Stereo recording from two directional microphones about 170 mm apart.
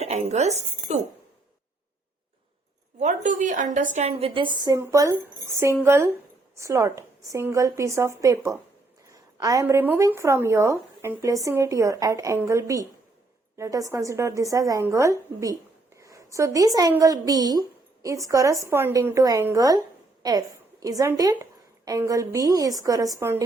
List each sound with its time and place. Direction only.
0.0 s speech: 40° right (ahead or behind)
3.0 s a woman's voice: 50° right (ahead or behind)
3.9 s a woman's voice: 35° right (ahead or behind); by 23.4 s 15° right (ahead or behind)